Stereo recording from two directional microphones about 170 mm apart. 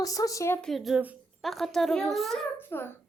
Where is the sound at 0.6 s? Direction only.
Centre (ahead or behind).